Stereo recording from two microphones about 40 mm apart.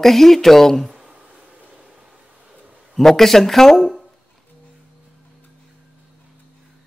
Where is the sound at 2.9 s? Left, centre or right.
Centre.